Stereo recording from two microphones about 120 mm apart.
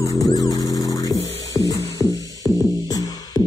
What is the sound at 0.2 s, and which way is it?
Music, 30° left (ahead or behind).